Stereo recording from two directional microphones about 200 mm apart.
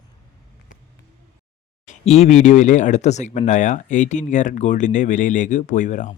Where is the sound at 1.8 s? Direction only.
30° left (ahead or behind).